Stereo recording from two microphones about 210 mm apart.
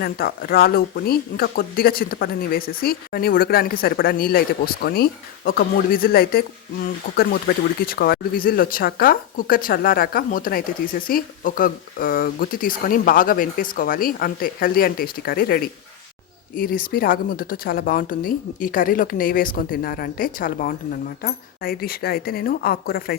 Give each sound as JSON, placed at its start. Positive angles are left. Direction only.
{"t": 0.0, "sound": "speech", "side_deg": 45}